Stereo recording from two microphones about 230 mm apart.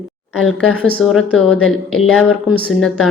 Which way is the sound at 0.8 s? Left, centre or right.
Centre.